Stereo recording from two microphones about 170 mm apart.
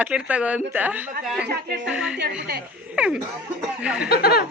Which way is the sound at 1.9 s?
5° right (ahead or behind).